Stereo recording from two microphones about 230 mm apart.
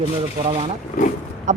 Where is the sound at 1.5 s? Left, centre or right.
Right.